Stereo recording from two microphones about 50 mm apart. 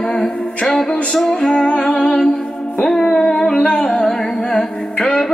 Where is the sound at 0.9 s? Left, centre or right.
Left.